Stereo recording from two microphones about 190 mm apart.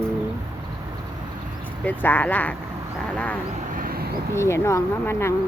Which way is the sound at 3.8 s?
50° right (ahead or behind).